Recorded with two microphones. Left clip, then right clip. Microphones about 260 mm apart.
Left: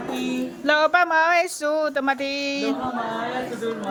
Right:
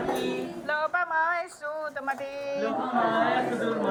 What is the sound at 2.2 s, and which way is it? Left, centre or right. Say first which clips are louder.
Child singing: left 5 dB; left.